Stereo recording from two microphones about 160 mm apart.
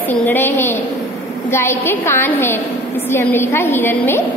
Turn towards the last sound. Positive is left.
turn(degrees=15)  # may be behind; listen again after turning